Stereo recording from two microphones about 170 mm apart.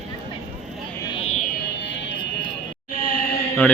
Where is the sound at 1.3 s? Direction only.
65° left (ahead or behind); by 2.2 s 90° left.